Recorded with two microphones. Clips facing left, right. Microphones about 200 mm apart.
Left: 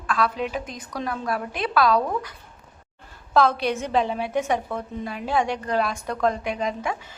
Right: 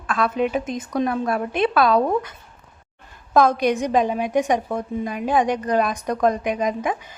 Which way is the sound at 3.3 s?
15° right (ahead or behind).